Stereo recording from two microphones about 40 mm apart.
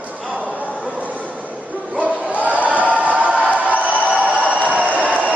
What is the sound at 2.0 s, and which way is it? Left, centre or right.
Crowd, right.